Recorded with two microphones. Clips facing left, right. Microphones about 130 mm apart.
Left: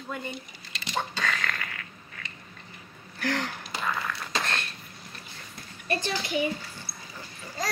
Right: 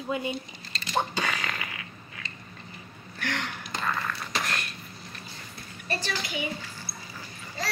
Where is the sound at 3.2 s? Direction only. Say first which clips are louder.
Left 3 dB; 35° left (ahead or behind).